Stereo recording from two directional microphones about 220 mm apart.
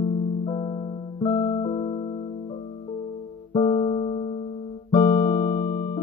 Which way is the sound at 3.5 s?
25° left (ahead or behind).